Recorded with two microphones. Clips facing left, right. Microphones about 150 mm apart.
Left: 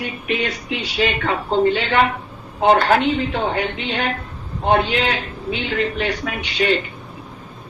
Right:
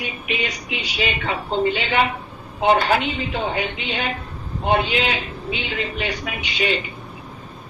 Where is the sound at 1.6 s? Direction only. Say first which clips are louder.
Left 4 dB; 15° right (ahead or behind).